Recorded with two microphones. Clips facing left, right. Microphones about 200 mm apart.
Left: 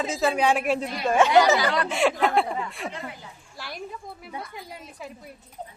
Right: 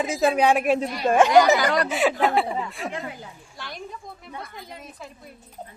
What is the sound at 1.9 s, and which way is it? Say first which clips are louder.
A man's voice: right 1 dB; centre (ahead or behind).